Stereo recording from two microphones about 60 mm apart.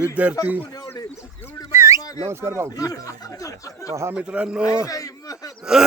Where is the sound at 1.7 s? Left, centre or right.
Right.